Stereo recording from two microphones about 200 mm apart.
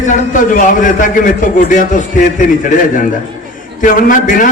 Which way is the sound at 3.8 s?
40° left (ahead or behind).